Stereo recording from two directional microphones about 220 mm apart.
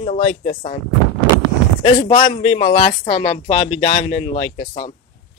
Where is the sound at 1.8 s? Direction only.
20° left (ahead or behind).